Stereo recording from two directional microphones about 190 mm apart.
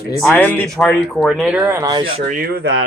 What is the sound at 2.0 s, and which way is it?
Speech, 50° right (ahead or behind).